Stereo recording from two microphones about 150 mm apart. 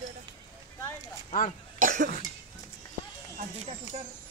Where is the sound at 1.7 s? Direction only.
55° right (ahead or behind).